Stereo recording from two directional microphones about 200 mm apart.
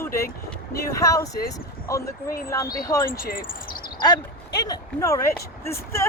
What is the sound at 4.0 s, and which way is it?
Speech, 20° left (ahead or behind).